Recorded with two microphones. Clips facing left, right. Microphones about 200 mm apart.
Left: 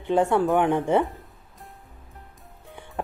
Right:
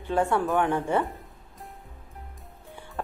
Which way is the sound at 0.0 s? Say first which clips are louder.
Left 4 dB; 20° left (ahead or behind).